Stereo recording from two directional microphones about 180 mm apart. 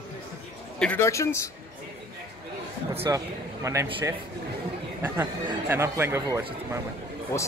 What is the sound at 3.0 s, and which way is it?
Speech, 15° right (ahead or behind).